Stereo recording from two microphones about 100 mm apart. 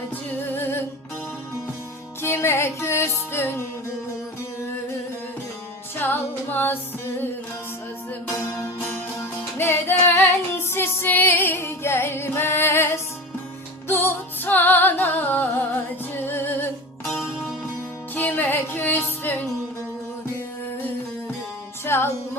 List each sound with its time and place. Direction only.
0.3 s music: 20° left (ahead or behind)
2.2 s music: 25° left (ahead or behind)
6.0 s music: 20° left (ahead or behind)
8.3 s music: 30° left (ahead or behind)
21.8 s music: 25° left (ahead or behind)